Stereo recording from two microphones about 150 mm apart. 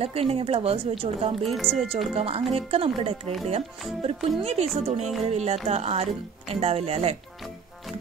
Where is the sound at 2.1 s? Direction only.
40° right (ahead or behind).